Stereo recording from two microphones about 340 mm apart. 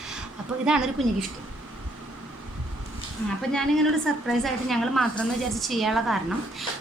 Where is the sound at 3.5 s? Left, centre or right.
Centre.